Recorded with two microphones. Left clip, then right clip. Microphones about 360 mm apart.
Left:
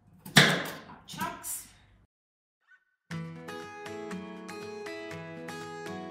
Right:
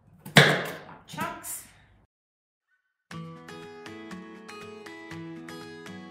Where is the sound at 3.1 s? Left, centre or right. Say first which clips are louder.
Left 1 dB; centre.